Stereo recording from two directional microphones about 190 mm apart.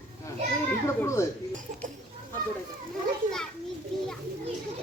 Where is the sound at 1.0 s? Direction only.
15° left (ahead or behind).